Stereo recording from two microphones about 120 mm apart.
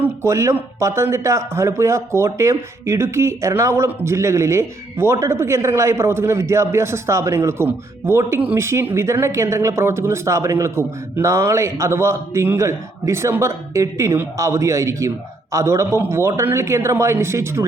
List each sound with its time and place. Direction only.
0.0 s speech: 20° right (ahead or behind)